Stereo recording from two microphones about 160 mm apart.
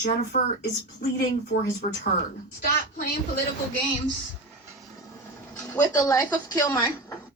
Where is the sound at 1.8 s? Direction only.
45° left (ahead or behind).